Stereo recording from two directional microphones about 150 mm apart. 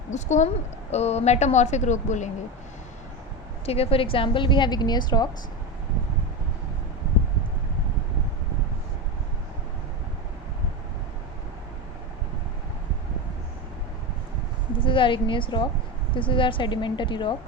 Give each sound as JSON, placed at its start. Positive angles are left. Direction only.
{"t": 0.1, "sound": "a woman's voice", "side_deg": 50}
{"t": 3.7, "sound": "a woman's voice", "side_deg": 40}
{"t": 14.8, "sound": "a woman's voice", "side_deg": 35}